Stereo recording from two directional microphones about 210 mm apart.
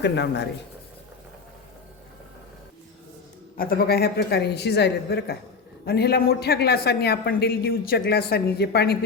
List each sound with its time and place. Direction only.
0.0 s speech: 55° left (ahead or behind)
3.6 s speech: 45° left (ahead or behind)